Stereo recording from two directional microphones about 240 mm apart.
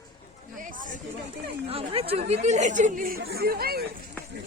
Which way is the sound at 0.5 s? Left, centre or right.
Right.